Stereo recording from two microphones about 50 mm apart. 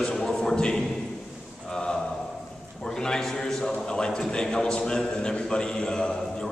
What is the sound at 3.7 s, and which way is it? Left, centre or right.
A man's voice, centre.